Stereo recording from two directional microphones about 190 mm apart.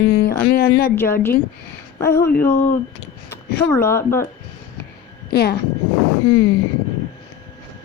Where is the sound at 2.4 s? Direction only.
10° left (ahead or behind).